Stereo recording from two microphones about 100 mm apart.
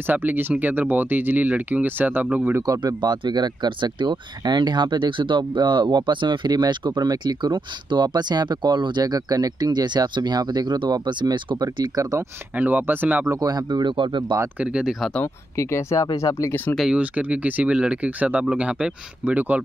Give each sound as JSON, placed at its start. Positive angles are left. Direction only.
{"t": 0.0, "sound": "speech", "side_deg": -20}
{"t": 2.6, "sound": "speech", "side_deg": -40}
{"t": 12.5, "sound": "speech", "side_deg": -15}
{"t": 13.3, "sound": "speech", "side_deg": -40}
{"t": 14.6, "sound": "speech", "side_deg": -10}
{"t": 15.0, "sound": "speech", "side_deg": 5}
{"t": 15.2, "sound": "speech", "side_deg": 30}
{"t": 16.7, "sound": "speech", "side_deg": -5}